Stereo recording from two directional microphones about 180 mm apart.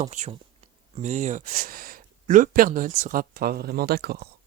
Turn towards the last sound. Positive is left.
turn(degrees=-60)  # may be behind; listen again after turning